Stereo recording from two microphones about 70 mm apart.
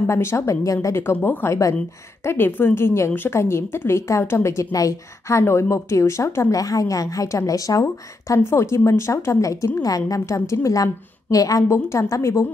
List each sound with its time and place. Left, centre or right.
0.0 s a woman's voice: left
1.2 s a woman's voice: left
4.7 s a woman's voice: left
5.4 s a woman's voice: left
6.5 s a woman's voice: left
8.4 s a woman's voice: left
11.7 s a woman's voice: left